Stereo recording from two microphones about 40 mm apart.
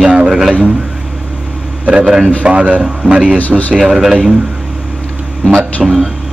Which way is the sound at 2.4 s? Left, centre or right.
Right.